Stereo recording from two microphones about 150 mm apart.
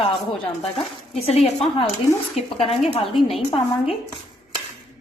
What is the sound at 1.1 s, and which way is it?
A woman's voice, 45° left (ahead or behind).